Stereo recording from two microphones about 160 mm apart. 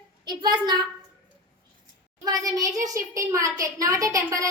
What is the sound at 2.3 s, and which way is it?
A woman's voice, 20° right (ahead or behind).